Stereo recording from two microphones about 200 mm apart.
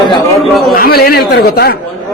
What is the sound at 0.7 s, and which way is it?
Speech, 50° left (ahead or behind).